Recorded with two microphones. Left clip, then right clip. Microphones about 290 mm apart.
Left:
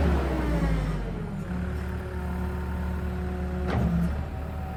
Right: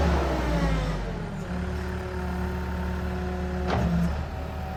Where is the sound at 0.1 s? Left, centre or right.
Right.